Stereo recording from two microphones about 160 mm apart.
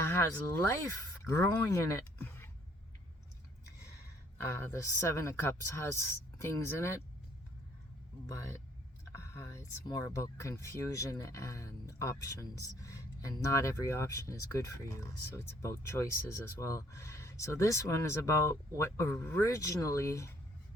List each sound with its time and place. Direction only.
0.1 s speech: 15° left (ahead or behind)
4.7 s speech: 20° left (ahead or behind)
9.1 s speech: 20° left (ahead or behind)